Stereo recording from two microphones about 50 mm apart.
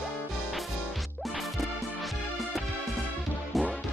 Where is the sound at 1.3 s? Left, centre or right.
Centre.